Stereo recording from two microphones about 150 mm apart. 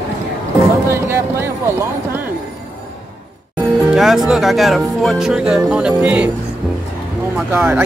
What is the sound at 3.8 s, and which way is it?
Speech, centre (ahead or behind).